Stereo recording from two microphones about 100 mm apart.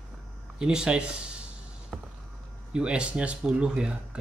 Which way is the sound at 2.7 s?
10° right (ahead or behind).